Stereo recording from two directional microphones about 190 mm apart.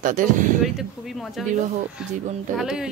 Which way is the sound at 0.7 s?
Centre (ahead or behind).